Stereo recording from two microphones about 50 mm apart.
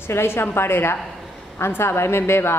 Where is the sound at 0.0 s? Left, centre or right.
Left.